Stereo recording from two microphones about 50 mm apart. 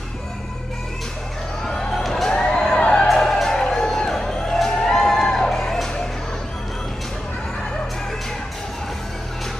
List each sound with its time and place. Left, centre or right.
1.7 s a sound: centre
2.8 s music: left
3.1 s music: centre